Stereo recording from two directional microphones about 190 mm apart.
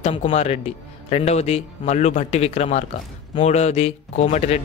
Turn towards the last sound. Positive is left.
turn(degrees=35)  # may be behind; listen again after turning